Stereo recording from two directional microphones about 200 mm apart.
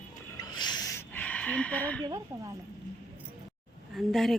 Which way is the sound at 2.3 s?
15° right (ahead or behind).